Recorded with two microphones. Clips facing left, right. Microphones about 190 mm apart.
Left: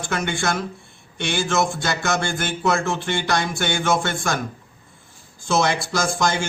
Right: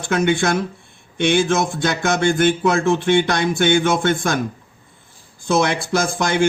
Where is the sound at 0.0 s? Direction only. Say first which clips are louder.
Right 7 dB; 60° right (ahead or behind).